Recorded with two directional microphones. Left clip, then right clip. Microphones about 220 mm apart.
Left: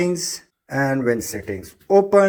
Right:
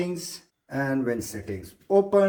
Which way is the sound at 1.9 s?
30° left (ahead or behind).